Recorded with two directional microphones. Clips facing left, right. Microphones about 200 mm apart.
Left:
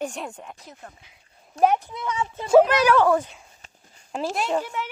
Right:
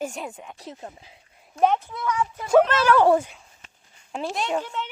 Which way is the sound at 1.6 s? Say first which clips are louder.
Left 1 dB; 15° left (ahead or behind).